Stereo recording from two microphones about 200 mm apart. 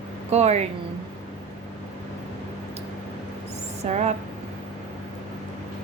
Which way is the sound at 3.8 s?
35° right (ahead or behind).